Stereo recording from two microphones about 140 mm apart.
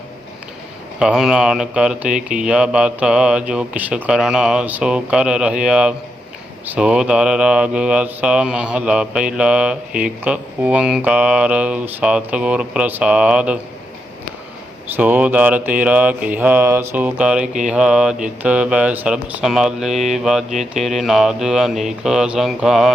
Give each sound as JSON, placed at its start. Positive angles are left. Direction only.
{"t": 0.9, "sound": "mantra", "side_deg": -5}
{"t": 14.8, "sound": "mantra", "side_deg": -15}
{"t": 17.7, "sound": "speech", "side_deg": -5}